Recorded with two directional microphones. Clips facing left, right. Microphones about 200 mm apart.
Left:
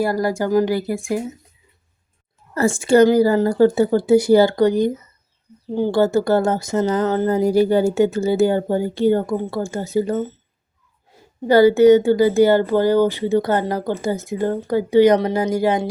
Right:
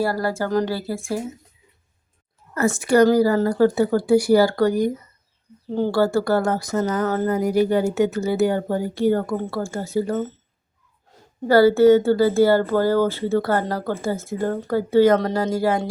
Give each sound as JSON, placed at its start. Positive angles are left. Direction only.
{"t": 0.0, "sound": "speech", "side_deg": 15}
{"t": 2.6, "sound": "speech", "side_deg": 30}
{"t": 11.4, "sound": "speech", "side_deg": 20}